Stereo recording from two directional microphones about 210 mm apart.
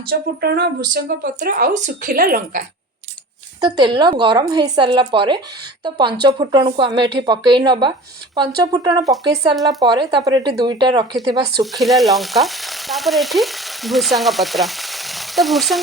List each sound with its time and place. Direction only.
0.1 s speech: 50° right (ahead or behind)
3.6 s speech: 20° right (ahead or behind)
11.6 s frying: centre (ahead or behind)